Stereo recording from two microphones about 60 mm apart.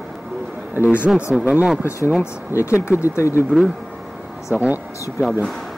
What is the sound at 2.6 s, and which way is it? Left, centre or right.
Speech, left.